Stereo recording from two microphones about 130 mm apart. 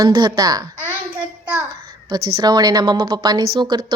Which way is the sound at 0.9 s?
15° right (ahead or behind).